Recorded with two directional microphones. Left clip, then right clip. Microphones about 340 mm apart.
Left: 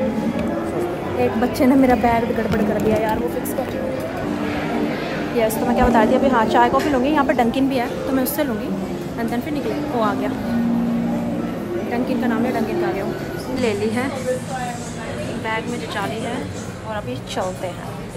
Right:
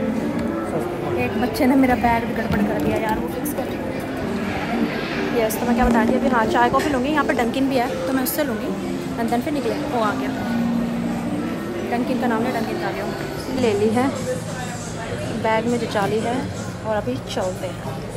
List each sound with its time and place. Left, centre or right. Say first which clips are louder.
1.6 s a woman's voice: left 2 dB; centre
5.4 s a woman's voice: left 3 dB; centre
11.9 s a woman's voice: right 1 dB; centre
13.6 s a woman's voice: right 3 dB; centre
15.4 s a woman's voice: right 6 dB; centre